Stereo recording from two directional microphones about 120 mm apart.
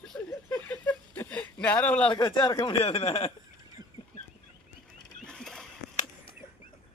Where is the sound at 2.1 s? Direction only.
40° left (ahead or behind); by 3.3 s 55° left (ahead or behind).